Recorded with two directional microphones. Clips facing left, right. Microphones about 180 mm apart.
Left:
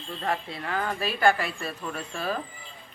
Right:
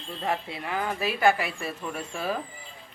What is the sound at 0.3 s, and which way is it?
Speech, 20° right (ahead or behind).